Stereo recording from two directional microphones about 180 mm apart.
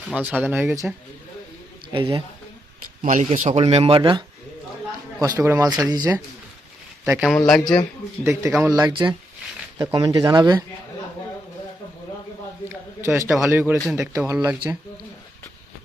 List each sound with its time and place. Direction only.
0.1 s speech: 5° right (ahead or behind)
1.9 s speech: 30° right (ahead or behind)
3.0 s speech: 45° right (ahead or behind)
5.2 s speech: 15° right (ahead or behind)
7.0 s speech: 5° right (ahead or behind)
8.2 s speech: 15° right (ahead or behind)
8.8 s speech: 25° right (ahead or behind)
13.0 s a man's voice: 15° right (ahead or behind)